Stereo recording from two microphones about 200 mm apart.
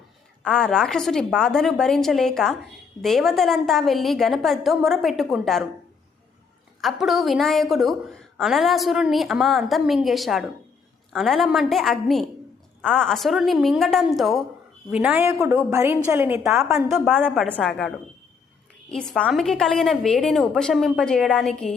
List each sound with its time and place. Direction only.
0.4 s a woman's voice: 5° left (ahead or behind)
6.8 s a woman's voice: centre (ahead or behind)